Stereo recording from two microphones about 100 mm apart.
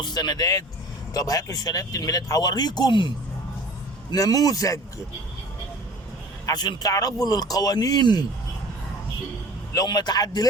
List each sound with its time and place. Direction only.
0.0 s speech: 45° left (ahead or behind)
4.1 s speech: 40° left (ahead or behind)
6.4 s speech: 45° left (ahead or behind)
9.7 s speech: 45° left (ahead or behind)